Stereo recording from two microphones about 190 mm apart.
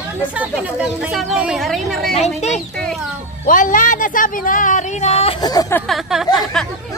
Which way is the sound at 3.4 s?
45° left (ahead or behind).